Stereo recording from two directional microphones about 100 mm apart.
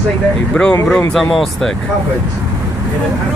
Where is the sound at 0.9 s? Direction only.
10° left (ahead or behind).